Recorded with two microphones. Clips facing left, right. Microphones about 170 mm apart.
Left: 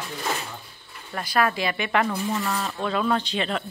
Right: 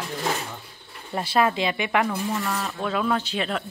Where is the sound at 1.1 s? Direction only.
25° right (ahead or behind).